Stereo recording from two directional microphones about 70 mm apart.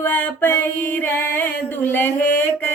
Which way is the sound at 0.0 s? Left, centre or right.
Left.